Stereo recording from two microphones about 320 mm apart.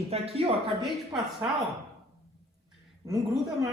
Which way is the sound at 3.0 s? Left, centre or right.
Centre.